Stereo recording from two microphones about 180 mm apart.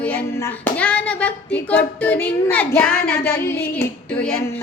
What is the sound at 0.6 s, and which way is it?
Child singing, 5° left (ahead or behind).